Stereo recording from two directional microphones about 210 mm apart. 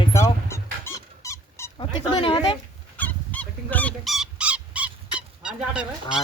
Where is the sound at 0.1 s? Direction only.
15° left (ahead or behind).